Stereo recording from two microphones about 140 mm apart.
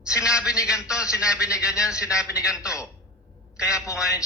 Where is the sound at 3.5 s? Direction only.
20° left (ahead or behind).